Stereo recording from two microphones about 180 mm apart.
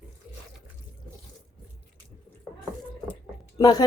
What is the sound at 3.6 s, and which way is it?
Speech, 20° left (ahead or behind).